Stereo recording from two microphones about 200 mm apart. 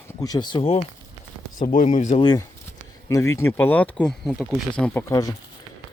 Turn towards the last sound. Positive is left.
turn(degrees=15)  # may be behind; listen again after turning